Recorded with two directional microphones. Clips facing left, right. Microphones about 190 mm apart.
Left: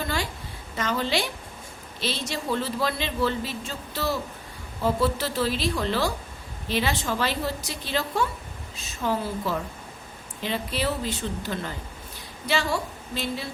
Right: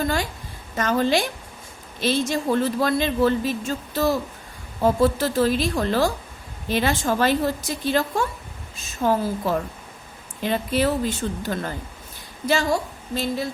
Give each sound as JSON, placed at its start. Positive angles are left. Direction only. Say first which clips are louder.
{"t": 0.8, "sound": "a woman's voice", "louder": "right 6 dB", "side_deg": -50}